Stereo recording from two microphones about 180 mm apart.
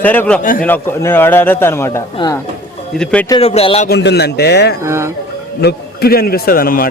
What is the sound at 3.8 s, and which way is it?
Speech, 65° left (ahead or behind).